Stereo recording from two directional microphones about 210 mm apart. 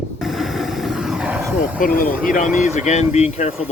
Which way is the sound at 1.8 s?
40° left (ahead or behind).